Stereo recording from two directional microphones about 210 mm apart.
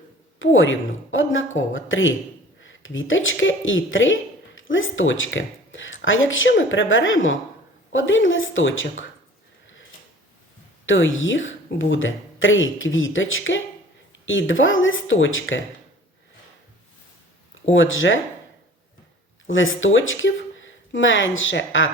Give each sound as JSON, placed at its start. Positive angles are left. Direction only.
{"t": 0.3, "sound": "a woman's voice", "side_deg": 65}
{"t": 10.8, "sound": "a woman's voice", "side_deg": 65}
{"t": 17.7, "sound": "speech", "side_deg": 65}
{"t": 19.5, "sound": "speech", "side_deg": 65}